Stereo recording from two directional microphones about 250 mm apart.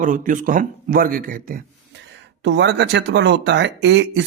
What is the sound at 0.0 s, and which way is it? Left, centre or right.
A man's voice, right.